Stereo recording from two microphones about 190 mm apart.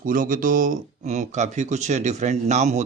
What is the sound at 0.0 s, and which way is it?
Speech, 45° right (ahead or behind).